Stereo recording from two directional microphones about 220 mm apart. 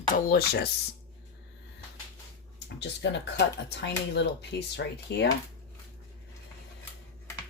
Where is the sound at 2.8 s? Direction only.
50° left (ahead or behind).